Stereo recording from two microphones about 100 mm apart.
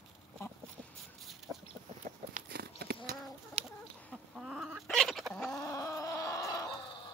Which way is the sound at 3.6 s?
90° right.